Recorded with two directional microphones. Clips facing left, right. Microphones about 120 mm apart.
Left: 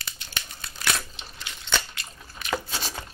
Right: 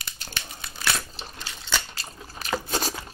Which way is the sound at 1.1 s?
35° right (ahead or behind).